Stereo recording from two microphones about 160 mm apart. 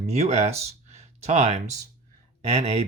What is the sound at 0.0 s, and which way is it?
Speech, 45° right (ahead or behind).